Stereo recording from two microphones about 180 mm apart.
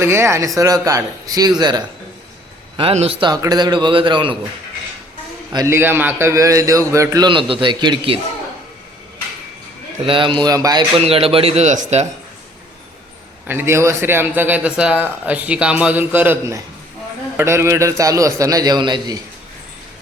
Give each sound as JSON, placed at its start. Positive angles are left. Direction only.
{"t": 0.0, "sound": "a man's voice", "side_deg": -15}
{"t": 2.7, "sound": "a man's voice", "side_deg": -35}
{"t": 5.5, "sound": "a man's voice", "side_deg": -15}
{"t": 10.0, "sound": "speech", "side_deg": -30}
{"t": 13.5, "sound": "a man's voice", "side_deg": -10}